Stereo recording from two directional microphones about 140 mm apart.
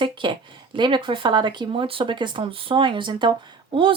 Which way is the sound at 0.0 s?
35° right (ahead or behind).